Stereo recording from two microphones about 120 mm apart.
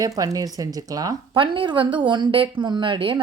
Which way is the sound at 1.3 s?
45° right (ahead or behind).